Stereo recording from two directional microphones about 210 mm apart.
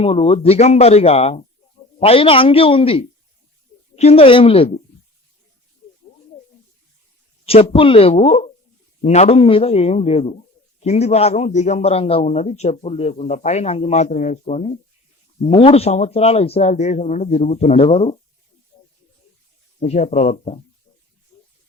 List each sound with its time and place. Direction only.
0.0 s speech: 25° left (ahead or behind)
7.4 s a man's voice: 25° left (ahead or behind)
19.8 s a man's voice: 30° left (ahead or behind)